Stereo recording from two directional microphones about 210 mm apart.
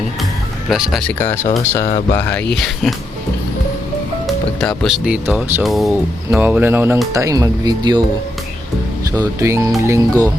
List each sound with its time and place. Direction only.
0.7 s speech: centre (ahead or behind)
4.3 s speech: 5° left (ahead or behind); by 8.0 s 20° right (ahead or behind)
9.1 s speech: 15° right (ahead or behind)